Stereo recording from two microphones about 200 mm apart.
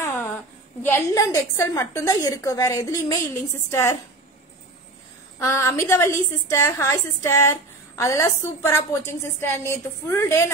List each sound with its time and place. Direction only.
0.0 s a sound: 10° left (ahead or behind)
0.8 s a woman's voice: 10° left (ahead or behind)
5.4 s a woman's voice: 15° left (ahead or behind)